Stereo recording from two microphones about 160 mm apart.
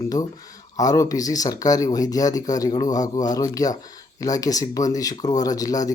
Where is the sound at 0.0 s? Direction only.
20° left (ahead or behind).